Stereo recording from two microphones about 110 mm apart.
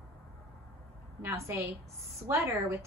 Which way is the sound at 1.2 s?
25° right (ahead or behind).